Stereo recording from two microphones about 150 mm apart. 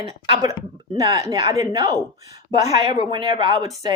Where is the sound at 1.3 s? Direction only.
25° right (ahead or behind).